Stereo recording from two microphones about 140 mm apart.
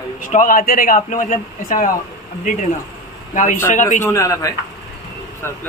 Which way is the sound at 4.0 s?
20° left (ahead or behind).